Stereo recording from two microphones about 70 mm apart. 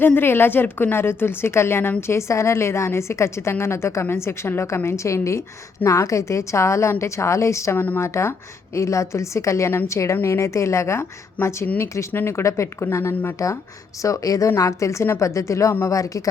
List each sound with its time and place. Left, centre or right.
0.0 s a woman's voice: left
7.8 s a woman's voice: left
8.0 s a woman's voice: left
11.4 s speech: left
11.8 s a woman's voice: left